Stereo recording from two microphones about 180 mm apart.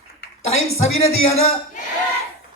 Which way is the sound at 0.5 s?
35° left (ahead or behind).